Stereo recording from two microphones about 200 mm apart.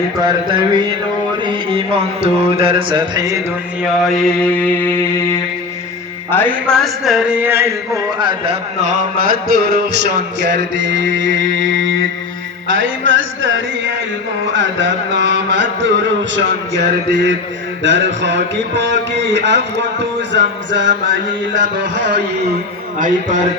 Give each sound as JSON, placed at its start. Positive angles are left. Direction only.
{"t": 0.3, "sound": "music", "side_deg": -20}
{"t": 3.8, "sound": "a man's voice", "side_deg": 0}
{"t": 8.8, "sound": "music", "side_deg": -40}
{"t": 10.4, "sound": "speech", "side_deg": -60}
{"t": 12.6, "sound": "music", "side_deg": -70}
{"t": 14.4, "sound": "speech", "side_deg": -65}
{"t": 17.8, "sound": "speech", "side_deg": -65}
{"t": 23.0, "sound": "a man's voice", "side_deg": -40}